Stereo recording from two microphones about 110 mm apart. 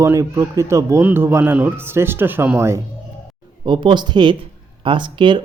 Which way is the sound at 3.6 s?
45° right (ahead or behind).